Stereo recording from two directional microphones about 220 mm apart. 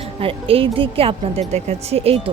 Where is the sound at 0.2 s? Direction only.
25° right (ahead or behind).